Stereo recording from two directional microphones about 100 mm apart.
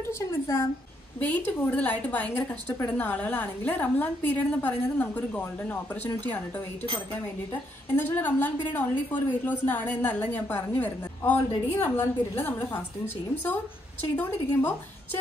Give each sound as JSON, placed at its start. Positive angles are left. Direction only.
{"t": 0.0, "sound": "a woman's voice", "side_deg": 25}
{"t": 7.9, "sound": "a woman's voice", "side_deg": 20}